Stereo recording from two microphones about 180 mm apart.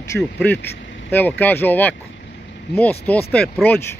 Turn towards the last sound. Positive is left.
turn(degrees=5)  # may be behind; listen again after turning